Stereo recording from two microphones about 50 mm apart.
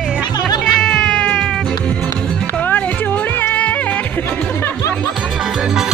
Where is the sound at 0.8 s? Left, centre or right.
Centre.